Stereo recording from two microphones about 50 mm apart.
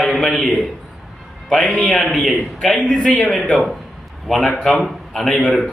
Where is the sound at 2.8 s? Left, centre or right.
Centre.